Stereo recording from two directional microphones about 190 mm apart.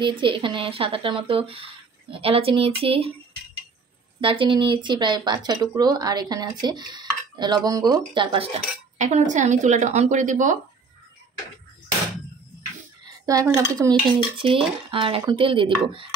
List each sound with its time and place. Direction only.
0.0 s speech: 25° right (ahead or behind)
4.2 s speech: 25° right (ahead or behind)
8.9 s speech: 40° right (ahead or behind)
13.0 s speech: 20° right (ahead or behind)
14.4 s speech: 30° right (ahead or behind)